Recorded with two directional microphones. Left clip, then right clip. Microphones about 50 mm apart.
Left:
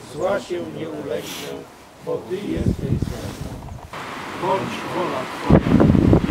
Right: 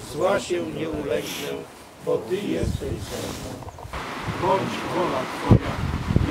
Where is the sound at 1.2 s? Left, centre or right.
Centre.